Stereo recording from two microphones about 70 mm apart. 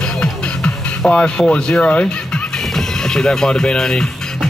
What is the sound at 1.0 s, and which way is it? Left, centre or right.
Speech, centre.